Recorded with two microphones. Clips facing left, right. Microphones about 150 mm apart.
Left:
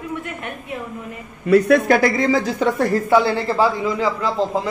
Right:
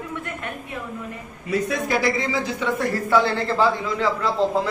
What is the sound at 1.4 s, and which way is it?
Speech, 65° left (ahead or behind).